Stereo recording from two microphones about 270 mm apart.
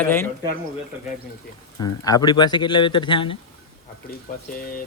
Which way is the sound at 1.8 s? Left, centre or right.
Centre.